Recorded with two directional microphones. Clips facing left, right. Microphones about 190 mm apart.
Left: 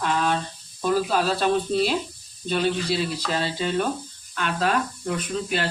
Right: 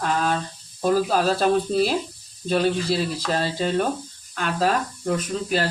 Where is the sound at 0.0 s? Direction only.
40° right (ahead or behind).